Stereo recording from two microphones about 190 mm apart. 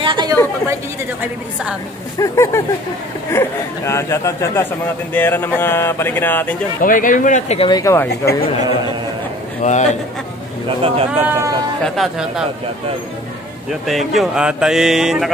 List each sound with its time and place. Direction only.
0.0 s chatter: 25° right (ahead or behind)
2.1 s speech: 15° left (ahead or behind)
6.8 s speech: 45° left (ahead or behind)
7.7 s speech: 15° left (ahead or behind)
8.1 s speech: 55° left (ahead or behind)
9.6 s a man's voice: 40° left (ahead or behind)
10.8 s speech: 30° right (ahead or behind)
11.2 s speech: 15° right (ahead or behind)
11.8 s speech: centre (ahead or behind)
13.7 s speech: centre (ahead or behind)